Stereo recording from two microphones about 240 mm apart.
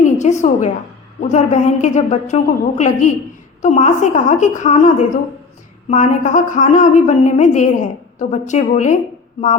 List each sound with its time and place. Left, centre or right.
0.0 s a woman's voice: left